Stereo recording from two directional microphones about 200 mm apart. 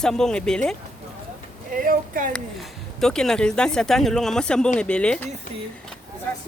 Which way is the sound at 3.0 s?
5° left (ahead or behind).